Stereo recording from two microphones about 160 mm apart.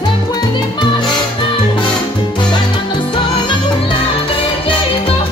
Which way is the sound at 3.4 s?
35° left (ahead or behind).